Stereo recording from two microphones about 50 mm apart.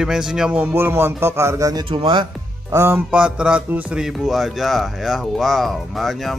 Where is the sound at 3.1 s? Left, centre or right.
Centre.